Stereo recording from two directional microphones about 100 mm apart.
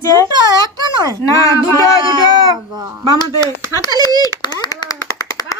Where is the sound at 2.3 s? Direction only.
40° right (ahead or behind).